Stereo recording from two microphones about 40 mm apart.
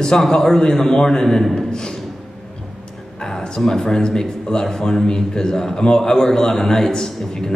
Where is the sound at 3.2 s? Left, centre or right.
Centre.